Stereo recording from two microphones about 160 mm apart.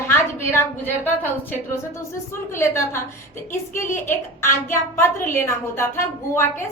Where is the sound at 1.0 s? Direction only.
10° left (ahead or behind).